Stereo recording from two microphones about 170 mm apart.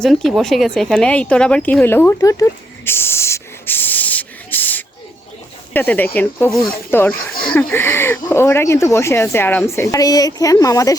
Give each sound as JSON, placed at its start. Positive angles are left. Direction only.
{"t": 0.0, "sound": "speech", "side_deg": 0}